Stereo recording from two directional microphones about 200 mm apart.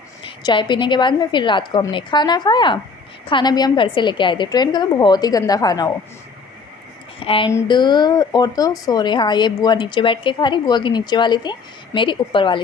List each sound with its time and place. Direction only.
0.2 s speech: 25° left (ahead or behind)
7.2 s speech: 25° left (ahead or behind)